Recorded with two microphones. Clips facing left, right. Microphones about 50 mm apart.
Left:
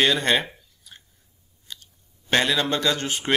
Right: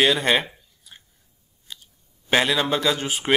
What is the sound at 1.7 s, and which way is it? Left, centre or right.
Chewing, centre.